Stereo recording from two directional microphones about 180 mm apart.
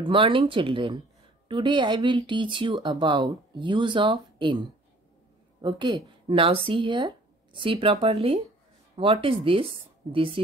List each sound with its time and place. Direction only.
0.0 s speech: 25° right (ahead or behind)